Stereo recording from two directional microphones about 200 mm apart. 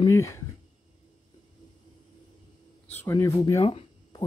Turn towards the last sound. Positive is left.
turn(degrees=25)  # may be behind; listen again after turning